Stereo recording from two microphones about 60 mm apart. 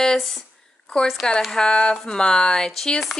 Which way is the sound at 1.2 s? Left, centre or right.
Centre.